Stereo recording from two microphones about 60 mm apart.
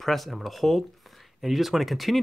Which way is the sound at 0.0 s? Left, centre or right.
Centre.